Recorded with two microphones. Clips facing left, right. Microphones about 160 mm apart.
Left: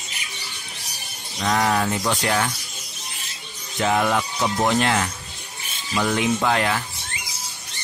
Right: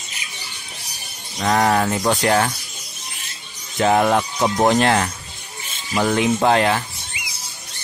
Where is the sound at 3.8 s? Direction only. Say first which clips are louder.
Right 4 dB; 45° right (ahead or behind).